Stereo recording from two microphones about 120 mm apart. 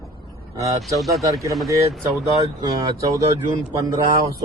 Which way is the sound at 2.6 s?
30° right (ahead or behind).